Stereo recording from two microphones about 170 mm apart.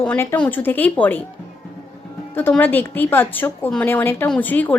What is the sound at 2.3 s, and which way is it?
A woman's voice, 10° left (ahead or behind).